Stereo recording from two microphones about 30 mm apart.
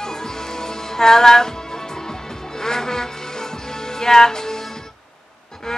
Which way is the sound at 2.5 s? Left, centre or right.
Centre.